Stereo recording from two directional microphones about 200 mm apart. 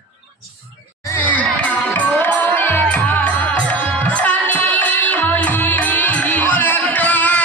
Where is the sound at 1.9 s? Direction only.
10° left (ahead or behind).